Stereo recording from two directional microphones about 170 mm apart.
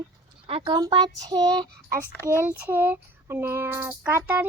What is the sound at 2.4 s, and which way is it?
Child singing, 10° right (ahead or behind).